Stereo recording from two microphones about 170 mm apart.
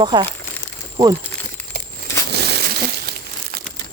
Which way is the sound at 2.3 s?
75° right (ahead or behind).